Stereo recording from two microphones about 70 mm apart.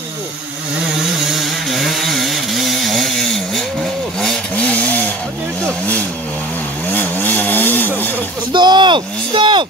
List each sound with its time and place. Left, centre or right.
1.2 s chainsaw: centre
4.6 s chainsaw: left
6.9 s chainsaw: left
8.5 s a sound: right